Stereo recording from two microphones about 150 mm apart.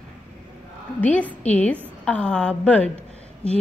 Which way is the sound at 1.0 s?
10° left (ahead or behind).